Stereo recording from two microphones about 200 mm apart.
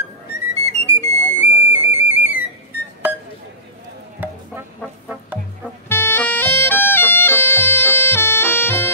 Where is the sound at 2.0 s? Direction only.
10° right (ahead or behind).